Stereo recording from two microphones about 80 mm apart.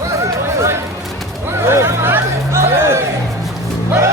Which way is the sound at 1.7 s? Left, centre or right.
Right.